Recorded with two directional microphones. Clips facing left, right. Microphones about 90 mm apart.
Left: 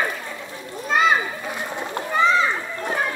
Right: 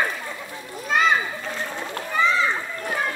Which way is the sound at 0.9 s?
5° left (ahead or behind).